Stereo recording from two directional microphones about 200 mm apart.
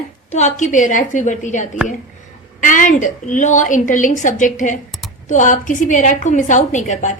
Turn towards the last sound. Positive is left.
turn(degrees=40)  # may be behind; listen again after turning